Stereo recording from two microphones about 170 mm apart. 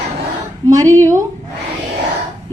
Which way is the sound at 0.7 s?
20° right (ahead or behind).